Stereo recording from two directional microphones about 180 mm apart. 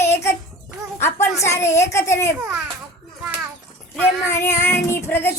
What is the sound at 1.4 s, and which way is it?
Speech, 15° left (ahead or behind).